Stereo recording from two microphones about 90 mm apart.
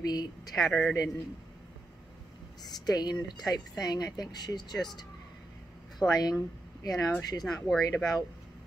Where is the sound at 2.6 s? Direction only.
50° left (ahead or behind).